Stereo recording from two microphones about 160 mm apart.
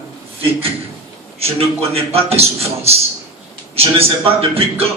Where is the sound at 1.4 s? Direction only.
40° right (ahead or behind).